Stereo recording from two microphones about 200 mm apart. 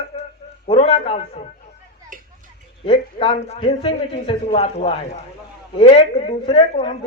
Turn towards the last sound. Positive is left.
turn(degrees=30)  # may be behind; listen again after turning